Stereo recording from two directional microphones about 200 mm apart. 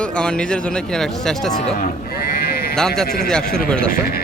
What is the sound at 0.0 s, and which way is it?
A man's voice, 5° left (ahead or behind).